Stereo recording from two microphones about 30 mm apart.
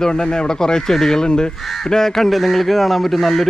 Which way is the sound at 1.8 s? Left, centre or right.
Centre.